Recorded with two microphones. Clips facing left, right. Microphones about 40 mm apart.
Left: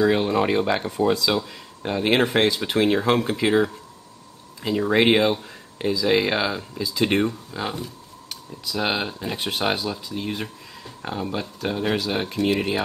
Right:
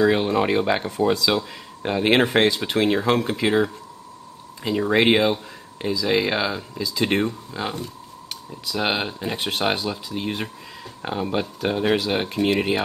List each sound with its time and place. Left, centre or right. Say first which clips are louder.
0.0 s speech: right 1 dB; centre